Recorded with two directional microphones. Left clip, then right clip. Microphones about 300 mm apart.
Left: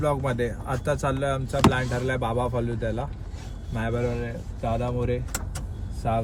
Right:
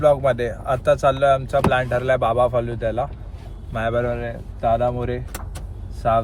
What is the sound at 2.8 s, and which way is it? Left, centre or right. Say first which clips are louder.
Speech: right 7 dB; right.